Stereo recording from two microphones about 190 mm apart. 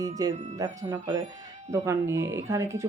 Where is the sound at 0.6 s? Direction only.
20° right (ahead or behind).